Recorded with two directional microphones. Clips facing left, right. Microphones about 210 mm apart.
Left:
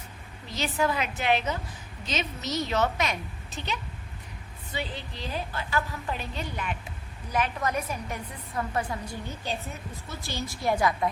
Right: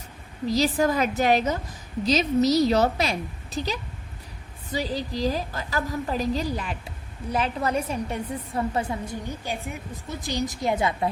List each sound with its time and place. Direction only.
0.4 s a woman's voice: 35° right (ahead or behind)